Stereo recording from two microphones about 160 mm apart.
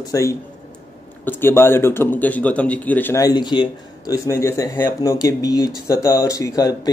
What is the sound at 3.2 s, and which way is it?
Speech, 25° left (ahead or behind).